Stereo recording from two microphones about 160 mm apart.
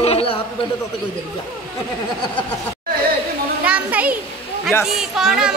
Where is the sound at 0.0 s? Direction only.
40° left (ahead or behind).